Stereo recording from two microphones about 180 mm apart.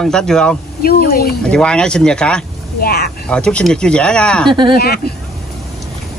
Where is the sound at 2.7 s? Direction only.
60° left (ahead or behind).